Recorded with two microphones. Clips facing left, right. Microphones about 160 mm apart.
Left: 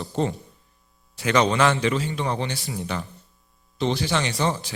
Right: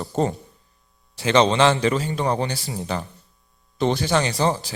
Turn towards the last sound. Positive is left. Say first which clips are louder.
# right 3 dB
turn(degrees=-35)  # may be behind; listen again after turning